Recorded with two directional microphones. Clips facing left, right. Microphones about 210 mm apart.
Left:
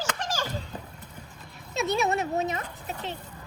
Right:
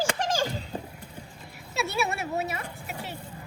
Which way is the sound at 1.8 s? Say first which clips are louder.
Left 3 dB; 35° left (ahead or behind).